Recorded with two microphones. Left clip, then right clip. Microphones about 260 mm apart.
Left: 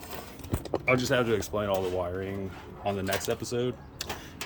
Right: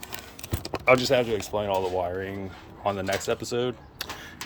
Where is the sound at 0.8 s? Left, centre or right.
Centre.